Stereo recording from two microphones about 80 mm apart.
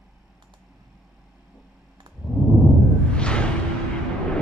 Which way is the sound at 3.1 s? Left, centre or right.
Centre.